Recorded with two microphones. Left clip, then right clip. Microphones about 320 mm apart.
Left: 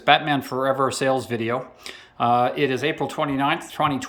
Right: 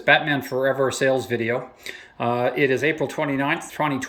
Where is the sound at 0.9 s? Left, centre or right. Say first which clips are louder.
Right 1 dB; left.